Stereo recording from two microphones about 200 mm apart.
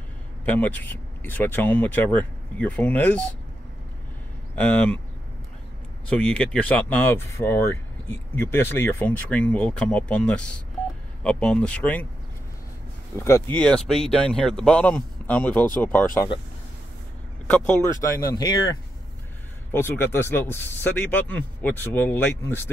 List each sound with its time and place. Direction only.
0.5 s speech: 5° left (ahead or behind)
4.6 s speech: 5° left (ahead or behind)
6.0 s speech: 5° left (ahead or behind)
13.1 s speech: 15° left (ahead or behind)
17.5 s speech: 10° left (ahead or behind)